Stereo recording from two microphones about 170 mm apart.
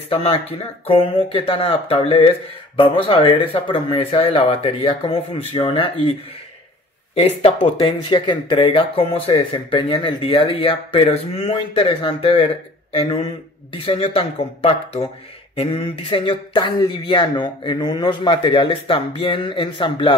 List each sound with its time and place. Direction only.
0.1 s speech: 35° left (ahead or behind)
7.2 s speech: 35° left (ahead or behind)